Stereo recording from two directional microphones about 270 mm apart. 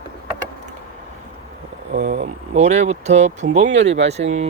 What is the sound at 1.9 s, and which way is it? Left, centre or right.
Speech, right.